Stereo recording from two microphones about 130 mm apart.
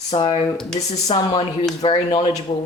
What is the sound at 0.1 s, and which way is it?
Speech, 40° left (ahead or behind).